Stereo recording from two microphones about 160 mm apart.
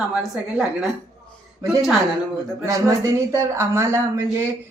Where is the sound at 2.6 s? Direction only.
20° right (ahead or behind).